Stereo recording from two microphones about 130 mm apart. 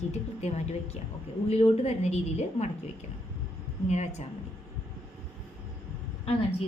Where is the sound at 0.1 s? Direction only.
55° left (ahead or behind).